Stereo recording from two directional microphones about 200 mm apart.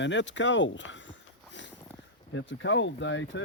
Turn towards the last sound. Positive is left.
turn(degrees=70)  # may be behind; listen again after turning